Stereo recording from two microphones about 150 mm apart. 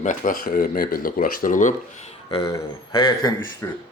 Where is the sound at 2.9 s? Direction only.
35° left (ahead or behind).